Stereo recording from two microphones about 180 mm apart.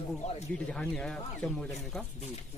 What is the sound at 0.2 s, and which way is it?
Speech, 40° left (ahead or behind).